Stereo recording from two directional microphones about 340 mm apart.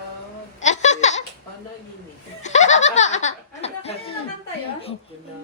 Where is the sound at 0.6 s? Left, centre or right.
Centre.